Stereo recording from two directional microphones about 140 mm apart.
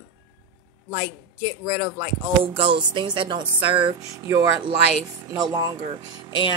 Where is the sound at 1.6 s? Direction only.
40° right (ahead or behind).